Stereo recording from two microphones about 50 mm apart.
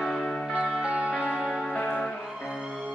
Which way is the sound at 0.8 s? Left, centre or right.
Right.